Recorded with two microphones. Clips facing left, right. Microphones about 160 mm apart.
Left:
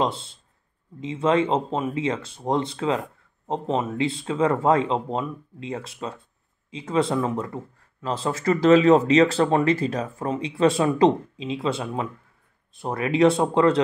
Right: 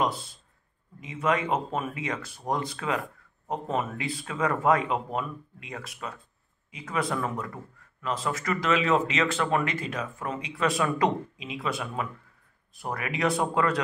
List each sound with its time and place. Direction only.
0.0 s speech: 25° left (ahead or behind)